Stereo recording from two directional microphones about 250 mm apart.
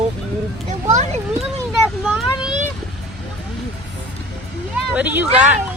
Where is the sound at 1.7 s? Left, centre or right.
Centre.